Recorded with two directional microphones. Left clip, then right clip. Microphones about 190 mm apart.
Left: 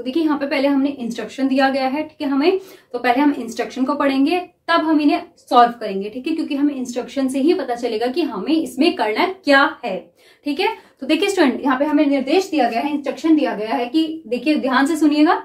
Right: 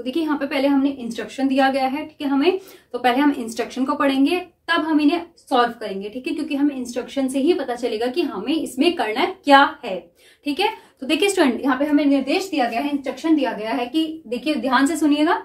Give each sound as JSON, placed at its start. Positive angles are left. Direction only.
{"t": 0.0, "sound": "a woman's voice", "side_deg": 0}
{"t": 11.1, "sound": "a woman's voice", "side_deg": 0}
{"t": 15.0, "sound": "a woman's voice", "side_deg": 20}